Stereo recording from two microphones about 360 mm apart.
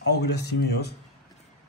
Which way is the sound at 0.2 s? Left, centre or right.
Left.